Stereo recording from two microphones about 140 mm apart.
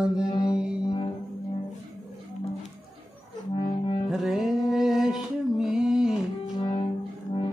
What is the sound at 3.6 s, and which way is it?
Music, 40° left (ahead or behind).